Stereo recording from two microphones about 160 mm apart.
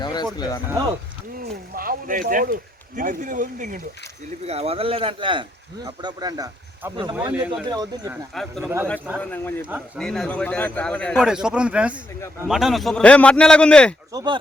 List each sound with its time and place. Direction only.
0.0 s a sound: 25° left (ahead or behind)
0.3 s speech: 25° left (ahead or behind)
1.7 s speech: 65° right (ahead or behind)
4.4 s speech: 40° right (ahead or behind)
7.3 s speech: 10° right (ahead or behind)
7.6 s speech: 25° right (ahead or behind)
8.6 s speech: 15° right (ahead or behind)
9.1 s a man's voice: 10° left (ahead or behind)
9.6 s speech: 10° right (ahead or behind)
10.0 s a man's voice: 5° left (ahead or behind)
11.2 s a man's voice: 5° right (ahead or behind)
14.1 s speech: 25° right (ahead or behind)